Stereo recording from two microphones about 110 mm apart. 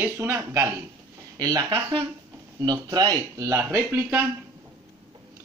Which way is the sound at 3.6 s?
20° right (ahead or behind).